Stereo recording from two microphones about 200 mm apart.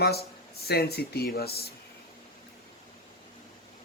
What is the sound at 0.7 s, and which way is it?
Speech, 50° left (ahead or behind).